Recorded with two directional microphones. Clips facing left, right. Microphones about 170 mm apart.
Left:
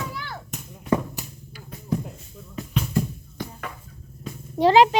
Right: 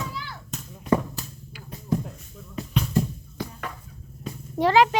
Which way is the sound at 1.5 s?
45° left (ahead or behind).